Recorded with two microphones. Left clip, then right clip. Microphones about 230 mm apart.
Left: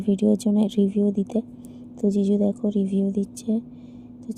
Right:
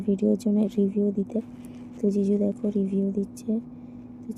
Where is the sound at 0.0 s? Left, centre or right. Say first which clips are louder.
Left 2 dB; left.